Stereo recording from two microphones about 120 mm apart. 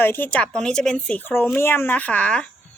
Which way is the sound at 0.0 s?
15° left (ahead or behind).